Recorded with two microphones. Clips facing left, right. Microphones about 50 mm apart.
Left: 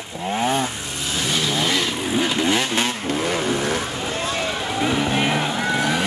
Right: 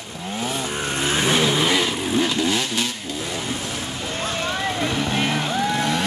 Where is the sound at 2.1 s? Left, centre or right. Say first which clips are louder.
Even; centre.